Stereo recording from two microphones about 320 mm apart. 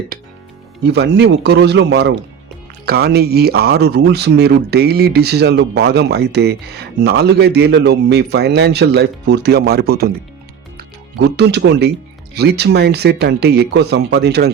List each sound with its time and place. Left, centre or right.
0.9 s speech: right